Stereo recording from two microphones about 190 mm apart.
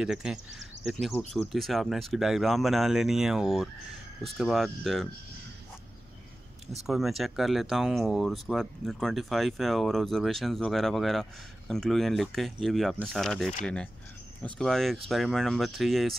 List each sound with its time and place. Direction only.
0.0 s speech: 5° right (ahead or behind)
6.9 s speech: centre (ahead or behind)